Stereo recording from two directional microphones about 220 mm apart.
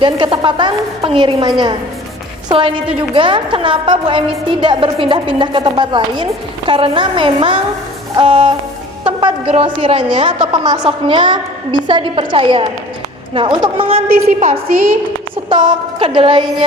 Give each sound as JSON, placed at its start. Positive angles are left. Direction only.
{"t": 0.0, "sound": "a woman's voice", "side_deg": -20}